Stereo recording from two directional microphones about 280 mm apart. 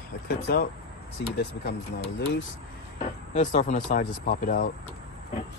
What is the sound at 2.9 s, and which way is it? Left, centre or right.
Speech, left.